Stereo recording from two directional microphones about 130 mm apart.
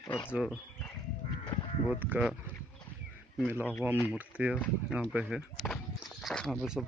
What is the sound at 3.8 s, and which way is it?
Speech, 15° right (ahead or behind).